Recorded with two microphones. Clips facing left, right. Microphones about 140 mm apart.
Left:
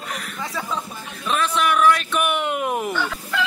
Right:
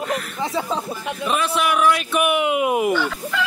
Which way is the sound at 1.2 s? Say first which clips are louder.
Even; 5° right (ahead or behind).